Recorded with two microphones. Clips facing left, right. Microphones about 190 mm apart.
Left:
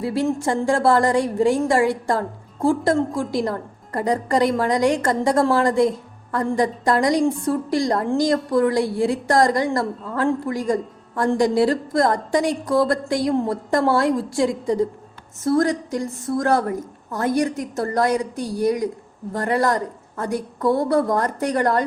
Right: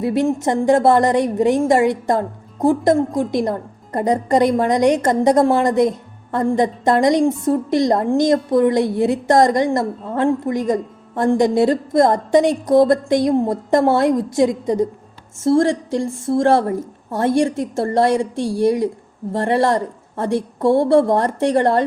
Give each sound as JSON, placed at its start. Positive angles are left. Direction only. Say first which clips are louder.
{"t": 0.0, "sound": "a woman's voice", "louder": "right 4 dB", "side_deg": -20}